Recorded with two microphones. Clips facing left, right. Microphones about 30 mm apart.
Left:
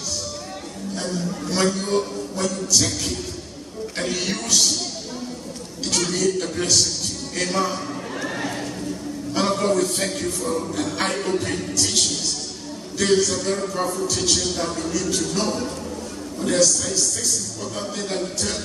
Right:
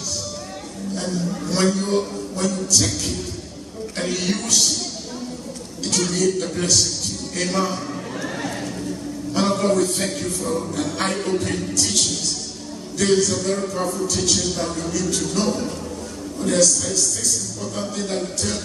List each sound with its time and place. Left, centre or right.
0.9 s a man's voice: centre
3.9 s a man's voice: centre
5.9 s a man's voice: centre
7.3 s a sound: centre
9.3 s a man's voice: centre